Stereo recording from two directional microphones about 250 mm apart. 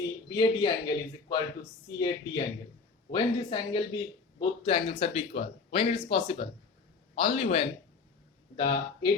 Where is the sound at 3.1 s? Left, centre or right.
Centre.